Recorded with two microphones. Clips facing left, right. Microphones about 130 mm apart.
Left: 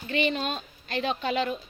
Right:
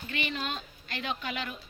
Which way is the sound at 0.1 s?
25° left (ahead or behind).